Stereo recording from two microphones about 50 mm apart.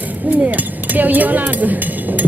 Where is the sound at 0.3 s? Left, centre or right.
Right.